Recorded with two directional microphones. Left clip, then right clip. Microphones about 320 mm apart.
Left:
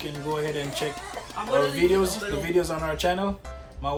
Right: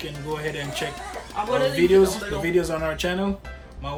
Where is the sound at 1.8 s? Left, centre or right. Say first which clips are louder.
Right 5 dB; centre.